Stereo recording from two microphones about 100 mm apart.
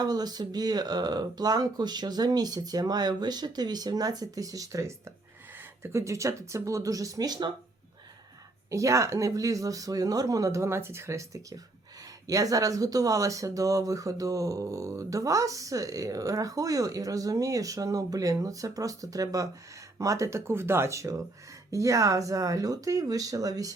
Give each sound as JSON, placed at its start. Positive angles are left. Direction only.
{"t": 0.0, "sound": "speech", "side_deg": -40}
{"t": 8.7, "sound": "speech", "side_deg": -30}